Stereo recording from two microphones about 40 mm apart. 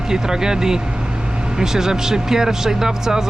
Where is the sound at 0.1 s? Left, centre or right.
Centre.